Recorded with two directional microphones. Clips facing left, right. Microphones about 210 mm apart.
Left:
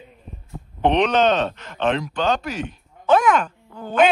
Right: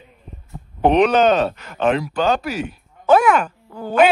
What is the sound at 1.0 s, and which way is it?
Speech, 10° right (ahead or behind).